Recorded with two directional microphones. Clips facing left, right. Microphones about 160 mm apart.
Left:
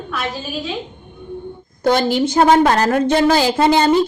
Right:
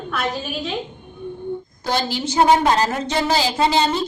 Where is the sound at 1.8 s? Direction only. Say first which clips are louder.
Left 8 dB; 55° left (ahead or behind).